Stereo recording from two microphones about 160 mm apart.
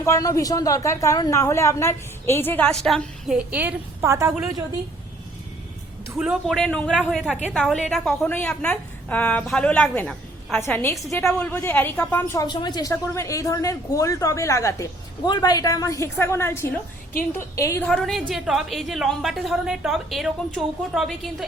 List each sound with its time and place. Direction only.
0.0 s a woman's voice: 20° left (ahead or behind); by 4.4 s 20° right (ahead or behind)
6.1 s a woman's voice: 5° right (ahead or behind); by 12.4 s 10° left (ahead or behind)
12.4 s speech: 25° left (ahead or behind)
17.8 s a woman's voice: centre (ahead or behind)